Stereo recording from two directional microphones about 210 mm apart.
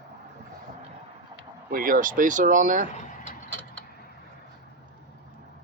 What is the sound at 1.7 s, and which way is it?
Speech, 40° right (ahead or behind).